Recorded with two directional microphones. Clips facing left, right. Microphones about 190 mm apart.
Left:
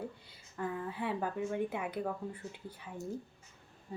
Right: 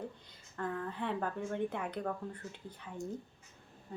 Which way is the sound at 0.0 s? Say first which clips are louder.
Left 1 dB; 10° left (ahead or behind).